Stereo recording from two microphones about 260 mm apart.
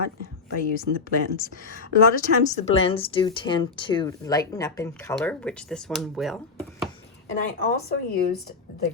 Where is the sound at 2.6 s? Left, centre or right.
Left; by 6.4 s centre.